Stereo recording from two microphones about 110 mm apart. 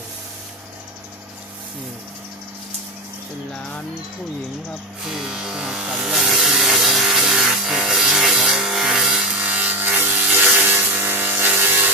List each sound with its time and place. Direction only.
5.0 s electric shaver: 5° right (ahead or behind)
10.7 s wood: 20° right (ahead or behind)